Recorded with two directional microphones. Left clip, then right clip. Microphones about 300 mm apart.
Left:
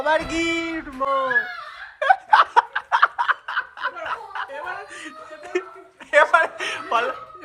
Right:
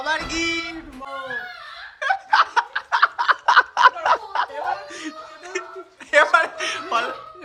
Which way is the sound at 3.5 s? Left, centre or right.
Centre.